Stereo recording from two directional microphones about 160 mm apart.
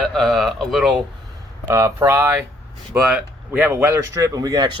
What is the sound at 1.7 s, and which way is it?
Speech, 20° right (ahead or behind).